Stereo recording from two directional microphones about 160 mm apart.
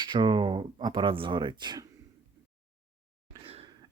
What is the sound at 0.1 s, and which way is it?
Speech, 30° right (ahead or behind).